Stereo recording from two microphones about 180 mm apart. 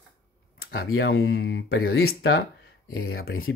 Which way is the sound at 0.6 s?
75° left (ahead or behind).